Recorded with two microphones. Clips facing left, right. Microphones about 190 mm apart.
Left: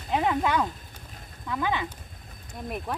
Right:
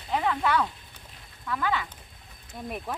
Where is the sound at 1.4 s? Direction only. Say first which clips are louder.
Left 1 dB; 20° left (ahead or behind).